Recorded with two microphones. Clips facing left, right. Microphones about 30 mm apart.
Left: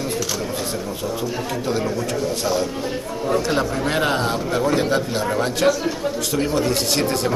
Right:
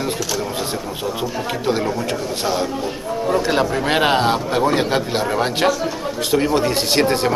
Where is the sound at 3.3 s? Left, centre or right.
Right.